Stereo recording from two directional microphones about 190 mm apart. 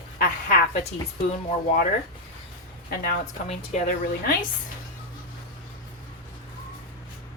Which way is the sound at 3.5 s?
40° left (ahead or behind).